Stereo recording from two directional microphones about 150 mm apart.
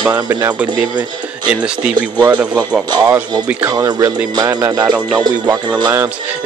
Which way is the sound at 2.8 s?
30° right (ahead or behind).